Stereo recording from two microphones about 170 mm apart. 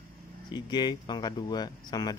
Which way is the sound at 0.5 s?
25° left (ahead or behind).